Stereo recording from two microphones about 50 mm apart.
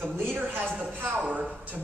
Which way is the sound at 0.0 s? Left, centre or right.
Right.